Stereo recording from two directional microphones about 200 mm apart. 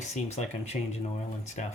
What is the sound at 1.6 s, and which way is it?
Speech, 35° left (ahead or behind).